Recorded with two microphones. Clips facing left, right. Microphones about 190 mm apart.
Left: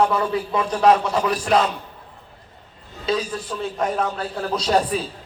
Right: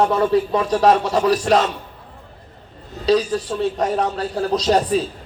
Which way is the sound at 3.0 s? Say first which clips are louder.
Right 7 dB; 35° right (ahead or behind).